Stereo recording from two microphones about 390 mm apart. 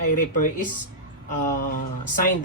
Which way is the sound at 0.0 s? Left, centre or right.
Centre.